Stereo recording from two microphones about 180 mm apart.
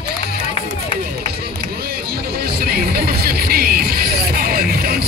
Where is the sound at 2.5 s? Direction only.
60° right (ahead or behind).